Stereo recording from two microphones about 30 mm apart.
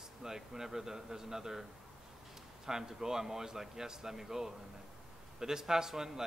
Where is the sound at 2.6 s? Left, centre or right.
Centre.